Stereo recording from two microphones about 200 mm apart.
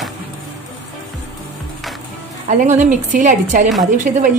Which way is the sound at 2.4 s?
40° right (ahead or behind).